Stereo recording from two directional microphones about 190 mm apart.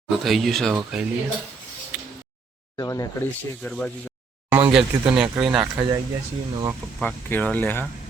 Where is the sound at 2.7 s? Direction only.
20° left (ahead or behind).